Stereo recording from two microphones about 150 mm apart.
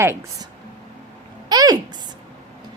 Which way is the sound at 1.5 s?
25° right (ahead or behind).